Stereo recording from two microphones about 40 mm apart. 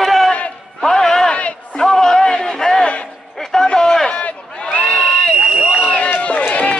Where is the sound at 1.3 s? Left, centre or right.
Left.